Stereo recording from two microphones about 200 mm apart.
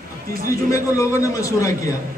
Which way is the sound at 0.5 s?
15° left (ahead or behind).